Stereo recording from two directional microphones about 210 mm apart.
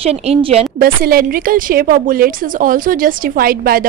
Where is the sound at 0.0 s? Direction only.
30° right (ahead or behind).